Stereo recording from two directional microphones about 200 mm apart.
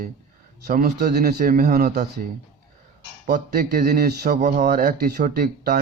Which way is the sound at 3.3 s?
50° right (ahead or behind).